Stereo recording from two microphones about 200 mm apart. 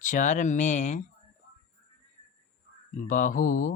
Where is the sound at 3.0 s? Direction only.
40° left (ahead or behind).